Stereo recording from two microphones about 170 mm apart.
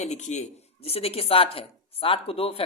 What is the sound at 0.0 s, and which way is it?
Speech, 45° left (ahead or behind).